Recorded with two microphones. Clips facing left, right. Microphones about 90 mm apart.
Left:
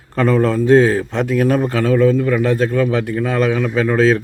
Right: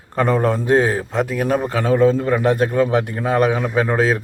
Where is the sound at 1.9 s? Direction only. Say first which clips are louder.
Even; 25° right (ahead or behind).